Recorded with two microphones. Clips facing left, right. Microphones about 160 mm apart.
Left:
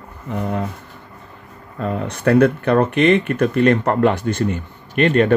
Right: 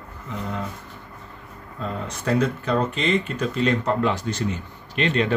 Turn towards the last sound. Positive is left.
turn(degrees=55)  # may be behind; listen again after turning